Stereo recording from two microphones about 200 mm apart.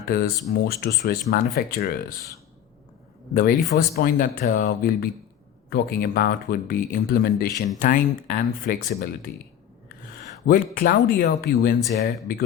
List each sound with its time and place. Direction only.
0.1 s speech: 45° left (ahead or behind)
3.8 s speech: 45° left (ahead or behind)
10.4 s speech: 45° left (ahead or behind)